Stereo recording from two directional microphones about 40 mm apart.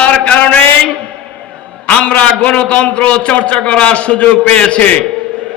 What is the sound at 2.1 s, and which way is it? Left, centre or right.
A man's voice, left.